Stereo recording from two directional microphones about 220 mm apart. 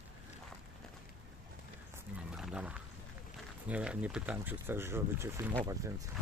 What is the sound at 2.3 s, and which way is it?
Wild animals, 5° right (ahead or behind).